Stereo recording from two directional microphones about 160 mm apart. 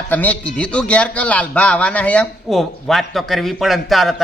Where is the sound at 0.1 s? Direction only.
10° left (ahead or behind).